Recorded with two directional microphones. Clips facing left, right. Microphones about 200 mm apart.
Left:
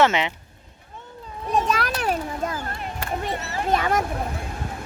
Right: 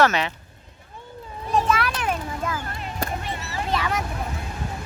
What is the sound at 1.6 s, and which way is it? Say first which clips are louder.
Children playing: even; 40° left (ahead or behind).